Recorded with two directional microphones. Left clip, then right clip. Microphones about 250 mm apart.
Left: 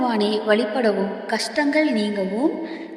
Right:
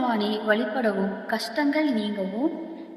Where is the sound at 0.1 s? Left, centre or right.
Left.